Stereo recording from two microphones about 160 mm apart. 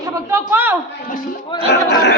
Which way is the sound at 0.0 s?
20° right (ahead or behind).